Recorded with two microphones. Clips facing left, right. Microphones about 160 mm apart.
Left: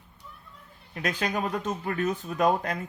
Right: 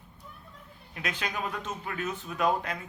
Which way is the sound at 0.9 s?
40° left (ahead or behind).